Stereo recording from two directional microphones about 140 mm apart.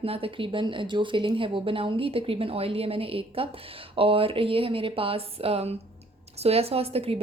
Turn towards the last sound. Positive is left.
turn(degrees=-45)  # may be behind; listen again after turning